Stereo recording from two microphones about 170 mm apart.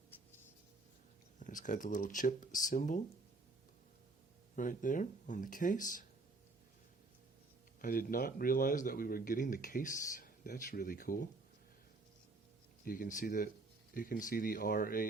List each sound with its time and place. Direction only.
1.4 s speech: 50° left (ahead or behind)
4.5 s speech: 50° left (ahead or behind)
7.8 s speech: 55° left (ahead or behind)
12.8 s speech: 55° left (ahead or behind)